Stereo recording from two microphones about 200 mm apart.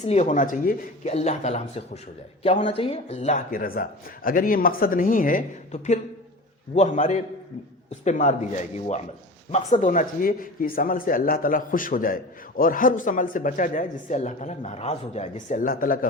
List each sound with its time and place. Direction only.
0.0 s speech: 35° left (ahead or behind)
9.5 s speech: 40° left (ahead or behind)